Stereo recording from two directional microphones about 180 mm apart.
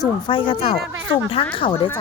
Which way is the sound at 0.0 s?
30° left (ahead or behind).